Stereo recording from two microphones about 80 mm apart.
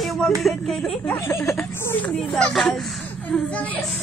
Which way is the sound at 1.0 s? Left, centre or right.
Left.